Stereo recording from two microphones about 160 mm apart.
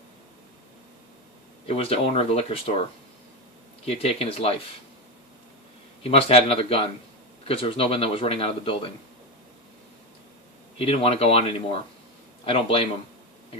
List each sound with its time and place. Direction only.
1.6 s a man's voice: 40° left (ahead or behind)
3.8 s a man's voice: 40° left (ahead or behind)
6.0 s a man's voice: 40° left (ahead or behind)
10.8 s a man's voice: 35° left (ahead or behind)